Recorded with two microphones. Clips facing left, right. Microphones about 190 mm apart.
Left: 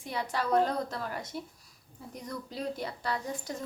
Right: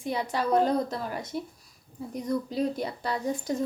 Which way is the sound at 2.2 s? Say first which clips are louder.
Right 8 dB; 15° right (ahead or behind).